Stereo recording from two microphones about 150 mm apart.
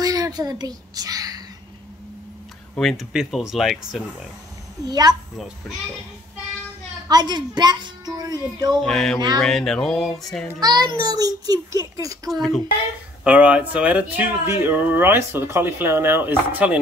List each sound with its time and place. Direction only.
0.0 s a sound: 25° right (ahead or behind)
2.7 s speech: centre (ahead or behind)
4.8 s a child's voice: 25° right (ahead or behind)
7.1 s a woman's voice: 30° right (ahead or behind)
8.8 s speech: 5° left (ahead or behind)
10.6 s a child's voice: 25° right (ahead or behind)
12.3 s speech: centre (ahead or behind)